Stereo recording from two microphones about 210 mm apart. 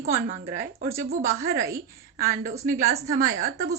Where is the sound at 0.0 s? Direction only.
40° right (ahead or behind).